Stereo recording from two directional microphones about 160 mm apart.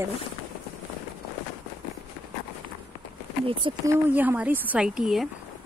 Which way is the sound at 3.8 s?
15° right (ahead or behind).